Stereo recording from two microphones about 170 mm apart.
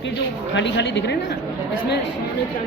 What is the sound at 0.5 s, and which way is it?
Speech, 90° left.